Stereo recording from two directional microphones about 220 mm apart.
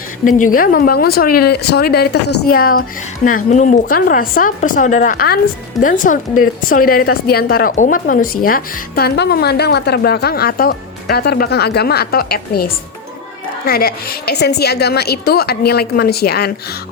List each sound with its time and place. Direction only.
0.3 s a woman's voice: 35° left (ahead or behind)